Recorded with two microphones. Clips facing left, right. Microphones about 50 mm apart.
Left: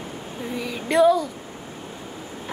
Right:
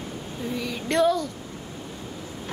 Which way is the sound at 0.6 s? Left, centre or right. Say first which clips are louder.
Left 4 dB; centre.